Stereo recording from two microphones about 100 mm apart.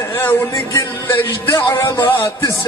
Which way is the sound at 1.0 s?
20° left (ahead or behind).